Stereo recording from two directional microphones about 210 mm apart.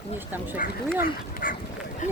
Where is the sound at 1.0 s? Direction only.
45° left (ahead or behind).